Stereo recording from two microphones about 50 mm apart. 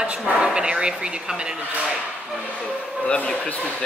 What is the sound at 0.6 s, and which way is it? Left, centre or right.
Speech, centre.